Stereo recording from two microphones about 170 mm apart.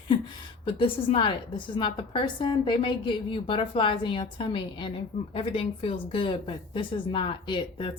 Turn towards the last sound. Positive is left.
turn(degrees=30)  # may be behind; listen again after turning